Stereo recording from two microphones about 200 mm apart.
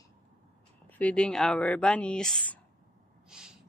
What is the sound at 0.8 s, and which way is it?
Speech, 5° left (ahead or behind).